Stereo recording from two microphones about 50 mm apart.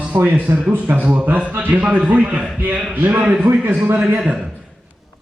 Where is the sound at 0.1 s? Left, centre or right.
Right.